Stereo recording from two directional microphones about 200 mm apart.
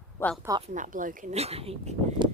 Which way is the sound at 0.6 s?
40° right (ahead or behind).